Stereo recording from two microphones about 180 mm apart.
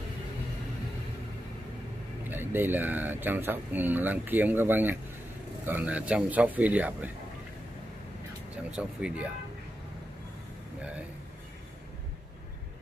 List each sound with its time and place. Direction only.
2.2 s speech: 10° right (ahead or behind)
8.6 s speech: 5° right (ahead or behind)